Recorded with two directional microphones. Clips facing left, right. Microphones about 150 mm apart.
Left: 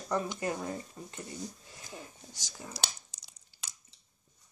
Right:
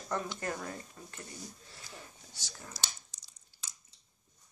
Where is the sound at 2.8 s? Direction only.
65° left (ahead or behind).